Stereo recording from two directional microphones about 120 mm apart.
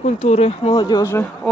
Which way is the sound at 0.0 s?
60° left (ahead or behind).